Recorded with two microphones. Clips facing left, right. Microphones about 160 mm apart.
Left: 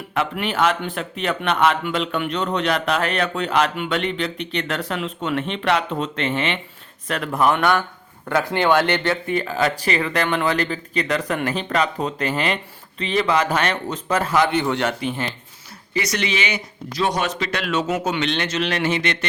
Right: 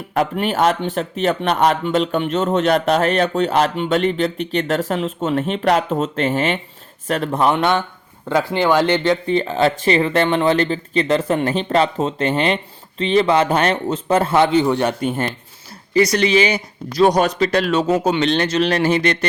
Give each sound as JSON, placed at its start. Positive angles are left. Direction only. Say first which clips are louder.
{"t": 0.1, "sound": "speech", "louder": "right 5 dB", "side_deg": -40}
{"t": 7.3, "sound": "speech", "louder": "right 1 dB", "side_deg": -25}
{"t": 14.6, "sound": "a man's voice", "louder": "right 4 dB", "side_deg": -15}
{"t": 15.0, "sound": "speech", "louder": "right 5 dB", "side_deg": -45}
{"t": 16.0, "sound": "speech", "louder": "right 9 dB", "side_deg": -35}